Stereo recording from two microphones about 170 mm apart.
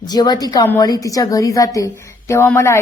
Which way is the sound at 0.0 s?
25° left (ahead or behind).